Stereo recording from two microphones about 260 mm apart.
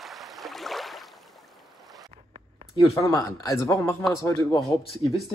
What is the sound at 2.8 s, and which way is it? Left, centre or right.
Speech, centre.